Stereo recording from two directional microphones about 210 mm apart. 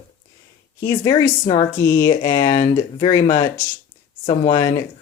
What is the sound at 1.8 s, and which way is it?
Speech, 15° left (ahead or behind).